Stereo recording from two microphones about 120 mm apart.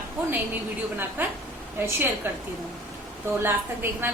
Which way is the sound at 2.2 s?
15° right (ahead or behind).